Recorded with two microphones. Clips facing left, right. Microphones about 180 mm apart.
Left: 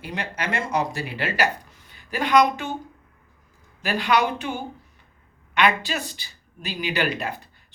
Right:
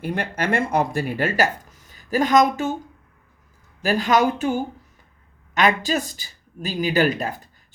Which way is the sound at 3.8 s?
40° right (ahead or behind).